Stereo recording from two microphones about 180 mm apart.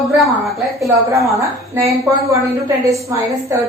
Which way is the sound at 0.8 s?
15° right (ahead or behind).